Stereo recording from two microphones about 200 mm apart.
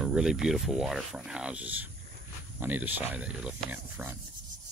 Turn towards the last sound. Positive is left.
turn(degrees=-15)  # may be behind; listen again after turning